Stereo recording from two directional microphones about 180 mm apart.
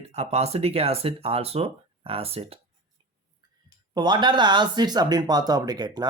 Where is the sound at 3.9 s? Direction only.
25° right (ahead or behind).